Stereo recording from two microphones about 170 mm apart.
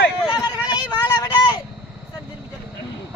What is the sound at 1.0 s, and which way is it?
Vehicle, 25° left (ahead or behind).